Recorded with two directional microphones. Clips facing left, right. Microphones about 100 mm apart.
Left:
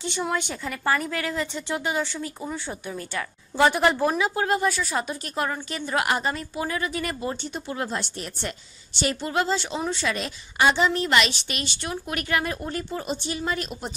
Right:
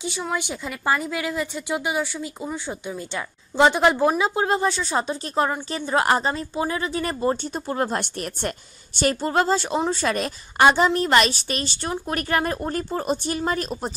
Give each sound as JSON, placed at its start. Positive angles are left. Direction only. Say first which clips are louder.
{"t": 0.3, "sound": "a woman's voice", "louder": "right 1 dB", "side_deg": -10}